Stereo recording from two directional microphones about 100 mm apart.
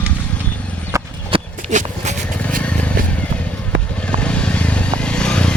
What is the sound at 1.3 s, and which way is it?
Walk, 65° right (ahead or behind).